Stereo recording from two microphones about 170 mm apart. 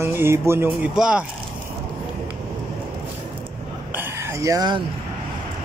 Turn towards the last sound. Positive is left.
turn(degrees=-20)  # may be behind; listen again after turning